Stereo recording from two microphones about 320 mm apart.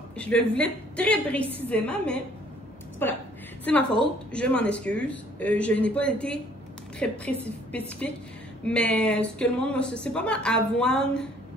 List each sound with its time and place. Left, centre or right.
0.2 s a woman's voice: centre